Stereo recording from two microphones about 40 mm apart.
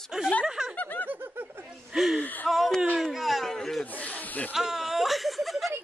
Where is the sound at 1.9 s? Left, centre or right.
Centre.